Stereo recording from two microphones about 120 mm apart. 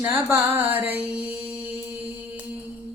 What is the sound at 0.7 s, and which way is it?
Mantra, 15° right (ahead or behind).